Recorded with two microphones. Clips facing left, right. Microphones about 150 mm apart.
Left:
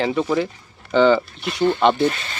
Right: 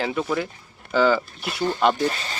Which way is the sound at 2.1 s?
35° right (ahead or behind).